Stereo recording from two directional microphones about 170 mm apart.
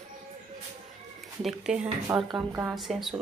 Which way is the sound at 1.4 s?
5° right (ahead or behind).